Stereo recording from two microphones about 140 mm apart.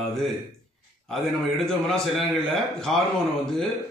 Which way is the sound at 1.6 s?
5° left (ahead or behind).